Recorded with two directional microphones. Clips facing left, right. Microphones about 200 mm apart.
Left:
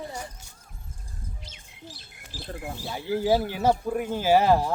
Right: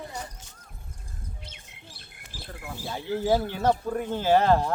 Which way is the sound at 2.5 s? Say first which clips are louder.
Left 5 dB; 45° left (ahead or behind).